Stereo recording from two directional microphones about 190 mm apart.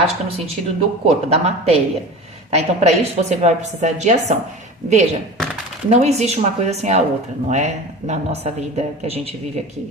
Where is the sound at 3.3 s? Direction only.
35° right (ahead or behind).